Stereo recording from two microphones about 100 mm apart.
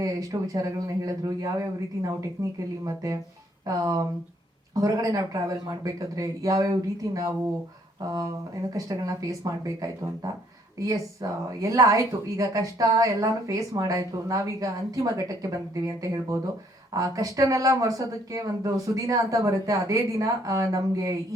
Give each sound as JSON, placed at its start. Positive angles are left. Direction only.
{"t": 0.0, "sound": "a woman's voice", "side_deg": -35}
{"t": 8.7, "sound": "a woman's voice", "side_deg": -35}